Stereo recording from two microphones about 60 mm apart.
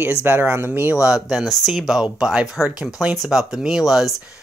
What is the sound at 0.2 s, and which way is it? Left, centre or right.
Speech, right.